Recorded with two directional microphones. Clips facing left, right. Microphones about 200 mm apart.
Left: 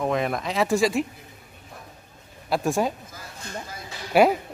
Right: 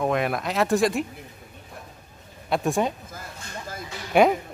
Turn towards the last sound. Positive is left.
turn(degrees=5)  # may be behind; listen again after turning